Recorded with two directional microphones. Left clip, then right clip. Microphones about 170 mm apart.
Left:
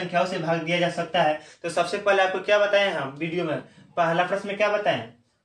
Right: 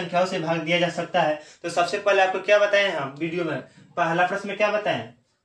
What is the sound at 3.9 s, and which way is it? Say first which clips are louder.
Speech: even; 15° right (ahead or behind).